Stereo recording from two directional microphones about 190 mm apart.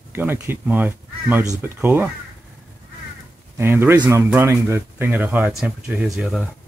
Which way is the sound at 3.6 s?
10° right (ahead or behind).